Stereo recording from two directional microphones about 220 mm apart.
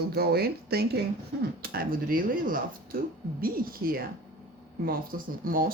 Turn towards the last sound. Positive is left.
turn(degrees=-40)  # may be behind; listen again after turning